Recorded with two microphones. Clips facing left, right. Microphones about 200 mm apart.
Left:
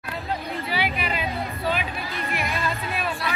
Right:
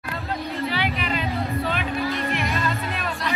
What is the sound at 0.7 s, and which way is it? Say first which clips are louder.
Music: right 1 dB; 10° left (ahead or behind).